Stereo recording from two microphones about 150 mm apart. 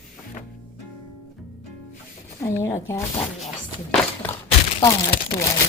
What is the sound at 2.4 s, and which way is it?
Speech, 20° left (ahead or behind).